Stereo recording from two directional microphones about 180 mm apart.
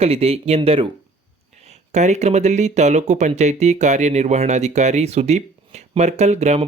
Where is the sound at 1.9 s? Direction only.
40° right (ahead or behind).